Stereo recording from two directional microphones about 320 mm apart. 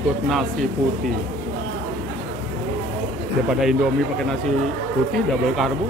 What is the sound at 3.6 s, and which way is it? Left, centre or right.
Speech, centre.